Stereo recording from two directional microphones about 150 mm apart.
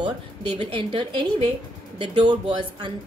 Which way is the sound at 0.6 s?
35° right (ahead or behind).